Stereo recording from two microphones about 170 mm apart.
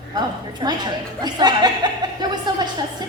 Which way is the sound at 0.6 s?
25° right (ahead or behind).